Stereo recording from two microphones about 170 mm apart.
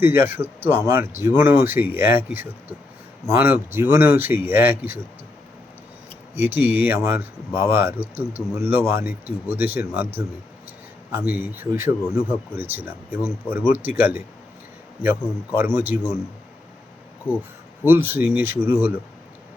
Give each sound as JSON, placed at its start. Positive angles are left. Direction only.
{"t": 0.0, "sound": "speech", "side_deg": -15}
{"t": 6.3, "sound": "speech", "side_deg": -10}
{"t": 15.5, "sound": "speech", "side_deg": -10}
{"t": 17.2, "sound": "speech", "side_deg": -10}